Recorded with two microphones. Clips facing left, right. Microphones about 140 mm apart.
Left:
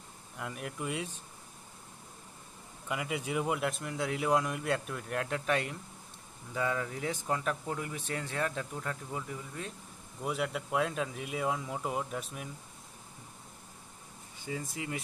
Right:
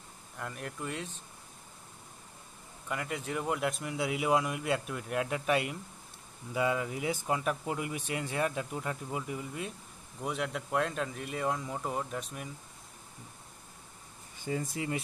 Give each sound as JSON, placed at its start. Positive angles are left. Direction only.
{"t": 0.4, "sound": "speech", "side_deg": 5}
{"t": 2.9, "sound": "speech", "side_deg": 5}
{"t": 10.2, "sound": "speech", "side_deg": 0}
{"t": 14.5, "sound": "speech", "side_deg": -35}